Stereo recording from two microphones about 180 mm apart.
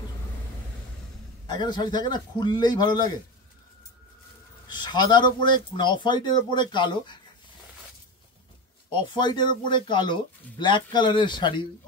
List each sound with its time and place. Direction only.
1.5 s a man's voice: 25° left (ahead or behind)
4.6 s a man's voice: 25° left (ahead or behind)
8.9 s a man's voice: 25° left (ahead or behind)